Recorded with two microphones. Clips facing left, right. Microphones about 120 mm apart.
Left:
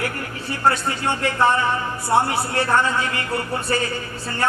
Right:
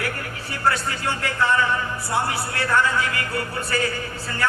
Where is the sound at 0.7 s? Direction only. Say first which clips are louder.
Left 3 dB; 25° left (ahead or behind).